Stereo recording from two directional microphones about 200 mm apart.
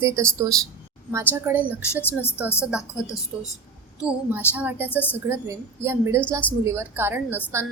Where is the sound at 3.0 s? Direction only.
15° left (ahead or behind).